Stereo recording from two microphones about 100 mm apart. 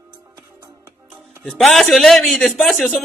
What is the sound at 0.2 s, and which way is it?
Music, 30° right (ahead or behind).